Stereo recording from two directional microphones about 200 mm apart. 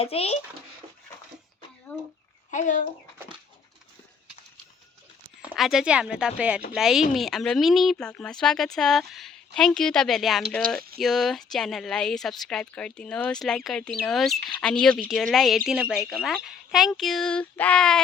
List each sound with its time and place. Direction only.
0.0 s a child's voice: 30° left (ahead or behind)
1.9 s speech: 5° left (ahead or behind)
2.5 s speech: 40° left (ahead or behind)
5.4 s speech: centre (ahead or behind)